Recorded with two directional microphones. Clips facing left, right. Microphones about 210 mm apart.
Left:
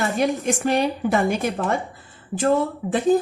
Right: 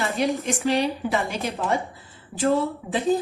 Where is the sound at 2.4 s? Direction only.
50° left (ahead or behind).